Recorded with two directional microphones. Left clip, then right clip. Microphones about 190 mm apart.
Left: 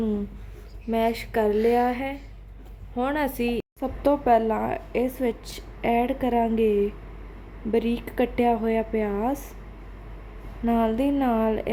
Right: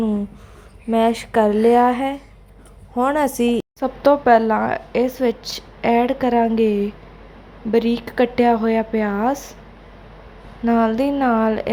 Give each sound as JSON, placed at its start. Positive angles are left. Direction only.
{"t": 0.9, "sound": "speech", "side_deg": -10}
{"t": 3.2, "sound": "a woman's voice", "side_deg": -20}
{"t": 3.8, "sound": "speech", "side_deg": -10}
{"t": 10.7, "sound": "a woman's voice", "side_deg": -5}